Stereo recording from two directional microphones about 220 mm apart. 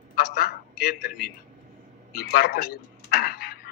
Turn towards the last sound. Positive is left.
turn(degrees=45)  # may be behind; listen again after turning